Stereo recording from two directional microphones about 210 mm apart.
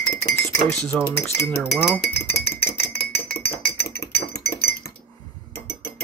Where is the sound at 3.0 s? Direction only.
50° left (ahead or behind).